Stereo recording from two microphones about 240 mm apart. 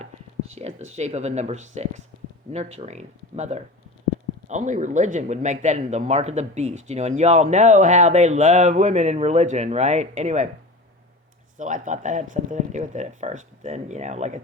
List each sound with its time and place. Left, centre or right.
0.5 s speech: right
11.5 s speech: right